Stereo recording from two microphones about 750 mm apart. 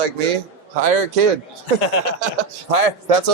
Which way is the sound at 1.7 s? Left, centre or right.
Left.